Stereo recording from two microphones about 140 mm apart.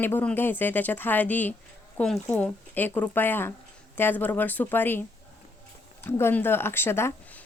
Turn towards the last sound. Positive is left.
turn(degrees=15)  # may be behind; listen again after turning